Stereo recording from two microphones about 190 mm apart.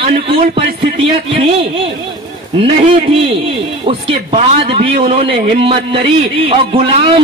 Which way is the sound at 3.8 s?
35° right (ahead or behind).